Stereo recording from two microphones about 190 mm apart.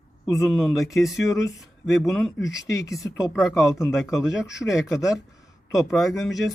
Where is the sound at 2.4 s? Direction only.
15° left (ahead or behind).